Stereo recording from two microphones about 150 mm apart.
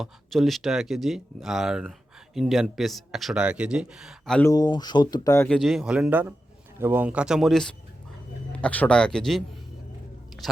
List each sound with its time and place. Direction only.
0.0 s speech: centre (ahead or behind)
4.5 s speech: 25° left (ahead or behind)
5.5 s speech: centre (ahead or behind)